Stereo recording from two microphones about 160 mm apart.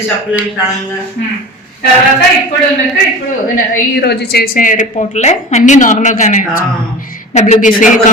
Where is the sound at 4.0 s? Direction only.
80° left.